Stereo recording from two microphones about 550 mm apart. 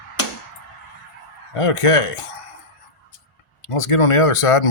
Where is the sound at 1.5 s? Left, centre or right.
Left.